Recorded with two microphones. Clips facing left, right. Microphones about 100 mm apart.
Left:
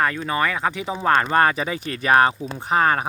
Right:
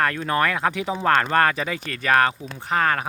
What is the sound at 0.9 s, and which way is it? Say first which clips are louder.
Speech: left 2 dB; 15° left (ahead or behind).